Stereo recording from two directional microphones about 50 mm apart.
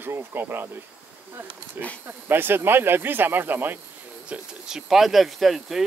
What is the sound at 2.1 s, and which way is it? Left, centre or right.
Speech, right.